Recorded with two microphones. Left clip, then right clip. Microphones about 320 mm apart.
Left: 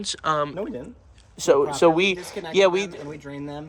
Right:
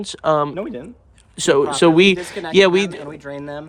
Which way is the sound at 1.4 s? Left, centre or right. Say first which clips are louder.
Right 3 dB; right.